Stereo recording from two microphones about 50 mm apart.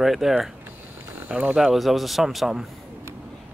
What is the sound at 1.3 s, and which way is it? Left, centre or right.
Speech, right.